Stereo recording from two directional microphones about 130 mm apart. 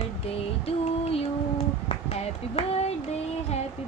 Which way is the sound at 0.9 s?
50° left (ahead or behind).